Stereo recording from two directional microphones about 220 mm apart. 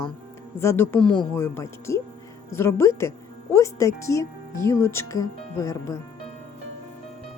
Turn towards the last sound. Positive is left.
turn(degrees=15)  # may be behind; listen again after turning